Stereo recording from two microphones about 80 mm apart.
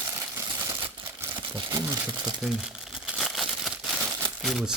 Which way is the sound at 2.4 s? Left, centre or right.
Centre.